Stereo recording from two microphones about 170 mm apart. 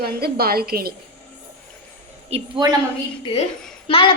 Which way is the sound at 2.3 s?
25° right (ahead or behind).